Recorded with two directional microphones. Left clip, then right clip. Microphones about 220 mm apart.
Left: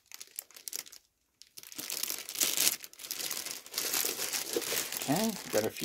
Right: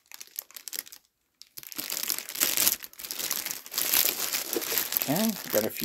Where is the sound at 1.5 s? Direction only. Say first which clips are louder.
Right 4 dB; 25° right (ahead or behind).